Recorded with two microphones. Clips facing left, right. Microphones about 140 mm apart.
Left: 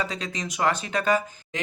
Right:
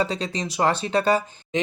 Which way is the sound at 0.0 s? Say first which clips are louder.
Right 5 dB; 30° right (ahead or behind).